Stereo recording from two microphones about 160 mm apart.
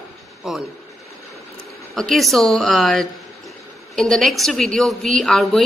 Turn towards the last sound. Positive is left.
turn(degrees=0)  # may be behind; listen again after turning